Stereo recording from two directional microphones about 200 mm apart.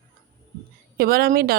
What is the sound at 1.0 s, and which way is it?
Speech, 50° right (ahead or behind).